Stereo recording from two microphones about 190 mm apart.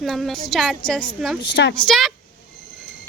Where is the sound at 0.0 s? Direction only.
Centre (ahead or behind).